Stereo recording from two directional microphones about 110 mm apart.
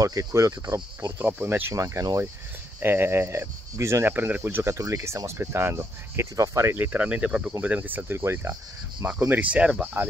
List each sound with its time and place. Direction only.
0.0 s speech: 30° right (ahead or behind)
9.3 s speech: 15° right (ahead or behind)